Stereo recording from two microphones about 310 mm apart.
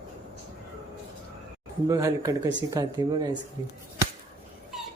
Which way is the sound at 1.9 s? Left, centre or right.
Centre.